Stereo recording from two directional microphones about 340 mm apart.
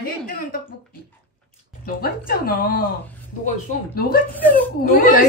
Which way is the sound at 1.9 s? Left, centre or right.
Left.